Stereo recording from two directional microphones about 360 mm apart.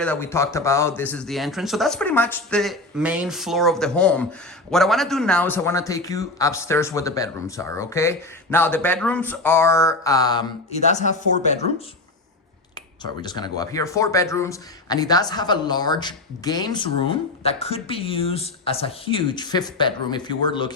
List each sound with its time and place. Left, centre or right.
0.0 s speech: centre
13.0 s speech: centre